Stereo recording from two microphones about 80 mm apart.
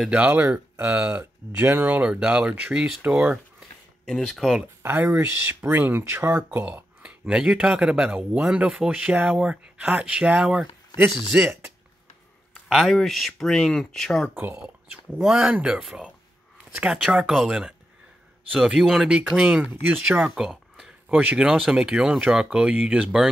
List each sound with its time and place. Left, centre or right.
0.1 s speech: centre
4.2 s speech: centre
4.8 s speech: right
9.1 s speech: right
9.4 s speech: centre
12.6 s speech: centre
15.4 s speech: centre